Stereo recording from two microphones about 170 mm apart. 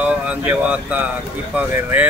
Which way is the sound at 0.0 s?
10° right (ahead or behind).